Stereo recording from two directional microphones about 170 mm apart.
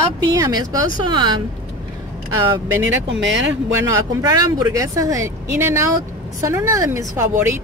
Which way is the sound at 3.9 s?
20° right (ahead or behind).